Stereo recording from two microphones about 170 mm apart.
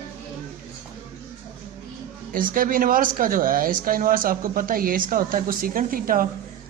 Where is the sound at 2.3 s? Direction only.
55° right (ahead or behind).